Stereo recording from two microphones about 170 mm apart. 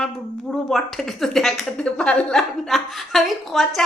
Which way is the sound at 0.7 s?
Centre (ahead or behind).